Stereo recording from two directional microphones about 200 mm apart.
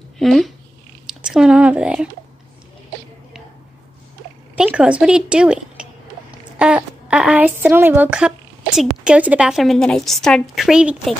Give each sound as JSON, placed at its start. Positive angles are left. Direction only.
{"t": 0.2, "sound": "speech", "side_deg": 0}
{"t": 1.0, "sound": "a sound", "side_deg": -5}
{"t": 4.6, "sound": "a woman's voice", "side_deg": -5}